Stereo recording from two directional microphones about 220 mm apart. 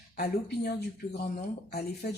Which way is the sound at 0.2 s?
45° left (ahead or behind).